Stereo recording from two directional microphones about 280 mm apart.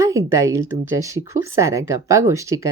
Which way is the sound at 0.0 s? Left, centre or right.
Centre.